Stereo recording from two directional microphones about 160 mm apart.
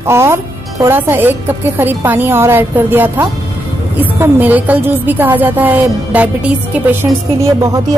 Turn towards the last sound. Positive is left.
turn(degrees=-25)  # may be behind; listen again after turning